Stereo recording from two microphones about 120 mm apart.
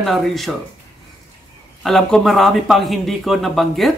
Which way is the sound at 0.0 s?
Centre (ahead or behind).